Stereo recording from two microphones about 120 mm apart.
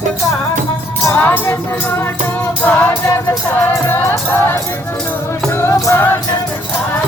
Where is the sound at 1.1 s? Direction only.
15° left (ahead or behind).